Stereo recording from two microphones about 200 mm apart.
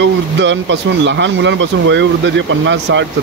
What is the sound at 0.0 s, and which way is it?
Speech, 65° right (ahead or behind).